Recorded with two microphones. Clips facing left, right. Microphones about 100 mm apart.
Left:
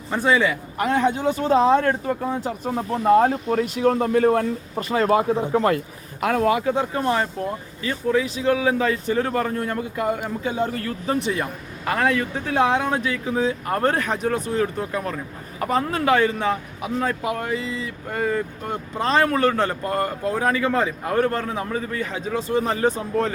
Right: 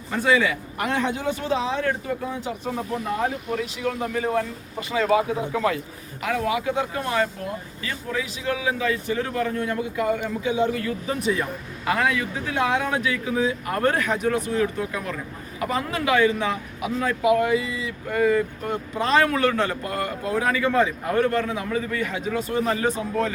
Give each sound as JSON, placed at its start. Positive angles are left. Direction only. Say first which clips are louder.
{"t": 0.1, "sound": "a man's voice", "louder": "left 1 dB", "side_deg": 30}
{"t": 3.1, "sound": "a man's voice", "louder": "left 11 dB", "side_deg": 50}
{"t": 12.6, "sound": "a man's voice", "louder": "right 1 dB", "side_deg": 25}
{"t": 20.6, "sound": "a man's voice", "louder": "right 1 dB", "side_deg": 20}
{"t": 21.2, "sound": "a man's voice", "louder": "even", "side_deg": 35}